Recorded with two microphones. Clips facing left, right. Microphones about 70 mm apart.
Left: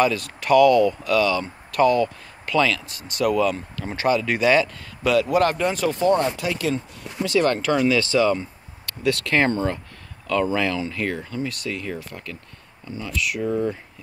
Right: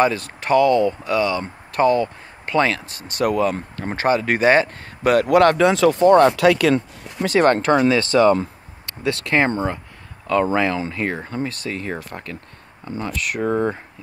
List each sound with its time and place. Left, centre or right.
0.0 s speech: right
5.3 s speech: right
5.9 s speech: right
7.2 s speech: right
8.8 s speech: right
13.5 s speech: right